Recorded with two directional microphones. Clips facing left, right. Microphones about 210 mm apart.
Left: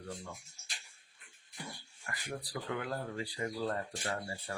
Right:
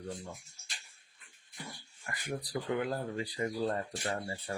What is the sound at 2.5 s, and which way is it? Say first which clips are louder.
Speech: right 5 dB; 20° right (ahead or behind).